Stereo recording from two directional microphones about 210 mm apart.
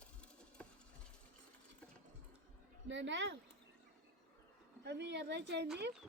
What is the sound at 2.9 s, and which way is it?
Speech, 60° right (ahead or behind).